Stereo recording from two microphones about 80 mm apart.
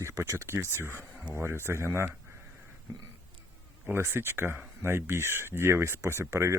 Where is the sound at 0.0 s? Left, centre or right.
Right.